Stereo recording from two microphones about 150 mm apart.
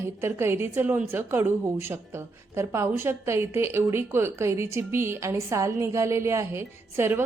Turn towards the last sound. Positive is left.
turn(degrees=-15)  # may be behind; listen again after turning